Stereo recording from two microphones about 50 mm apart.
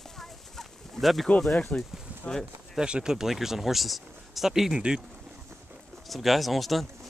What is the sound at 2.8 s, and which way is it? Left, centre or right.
Speech, centre.